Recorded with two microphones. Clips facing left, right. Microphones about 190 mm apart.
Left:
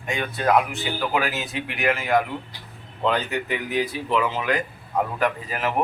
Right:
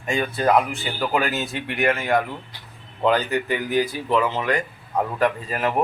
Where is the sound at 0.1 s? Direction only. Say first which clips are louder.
Right 2 dB; centre (ahead or behind).